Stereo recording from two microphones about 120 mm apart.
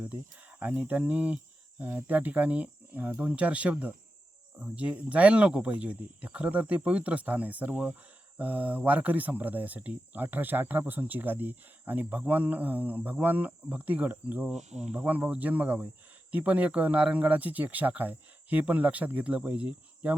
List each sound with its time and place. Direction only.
0.6 s speech: 15° right (ahead or behind)
14.7 s speech: 70° right (ahead or behind)
14.9 s speech: 15° right (ahead or behind)